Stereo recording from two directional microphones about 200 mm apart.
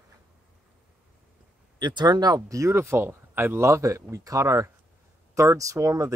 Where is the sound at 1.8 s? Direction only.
20° right (ahead or behind).